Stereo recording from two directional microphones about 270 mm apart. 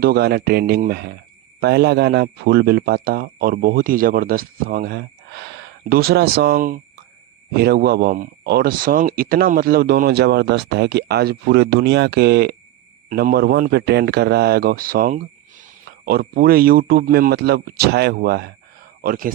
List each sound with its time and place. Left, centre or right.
0.0 s speech: right